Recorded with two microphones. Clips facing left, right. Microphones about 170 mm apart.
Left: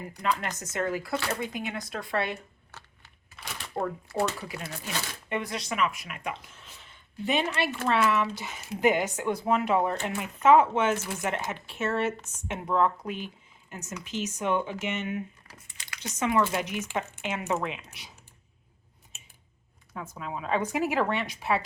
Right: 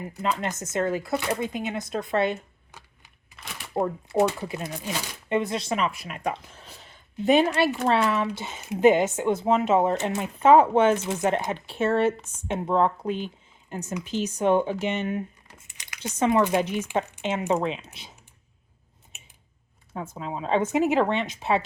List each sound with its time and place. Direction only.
0.2 s speech: 25° right (ahead or behind)
3.4 s a sound: centre (ahead or behind)
3.8 s speech: 20° right (ahead or behind)
10.4 s speech: 35° right (ahead or behind)
10.9 s speech: 20° right (ahead or behind)
15.5 s a sound: 20° right (ahead or behind)
16.0 s speech: 30° right (ahead or behind)
19.9 s speech: 25° right (ahead or behind)